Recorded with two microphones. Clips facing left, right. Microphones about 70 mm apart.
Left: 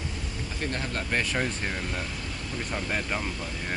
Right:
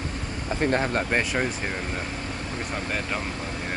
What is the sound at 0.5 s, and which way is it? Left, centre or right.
Speech, right.